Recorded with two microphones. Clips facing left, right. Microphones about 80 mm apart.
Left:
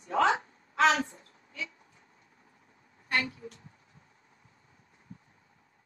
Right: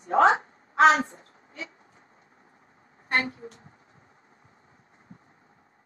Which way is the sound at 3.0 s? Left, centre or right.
Right.